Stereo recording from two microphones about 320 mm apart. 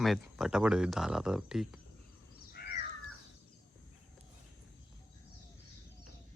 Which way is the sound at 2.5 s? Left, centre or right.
Left.